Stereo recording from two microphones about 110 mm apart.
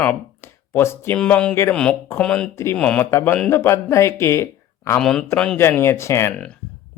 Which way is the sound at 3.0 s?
25° left (ahead or behind).